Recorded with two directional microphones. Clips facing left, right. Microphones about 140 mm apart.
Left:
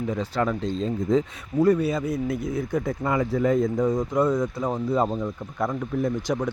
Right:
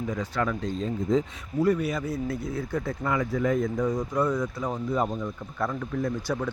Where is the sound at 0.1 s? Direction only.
30° left (ahead or behind).